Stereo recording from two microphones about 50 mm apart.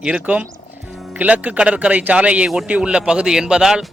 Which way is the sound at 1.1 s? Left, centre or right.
Right.